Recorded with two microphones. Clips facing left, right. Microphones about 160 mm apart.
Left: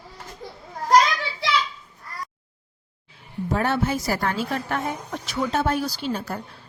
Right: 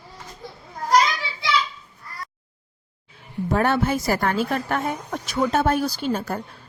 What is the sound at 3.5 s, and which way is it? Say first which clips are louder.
A woman's voice: right 2 dB; 55° right (ahead or behind).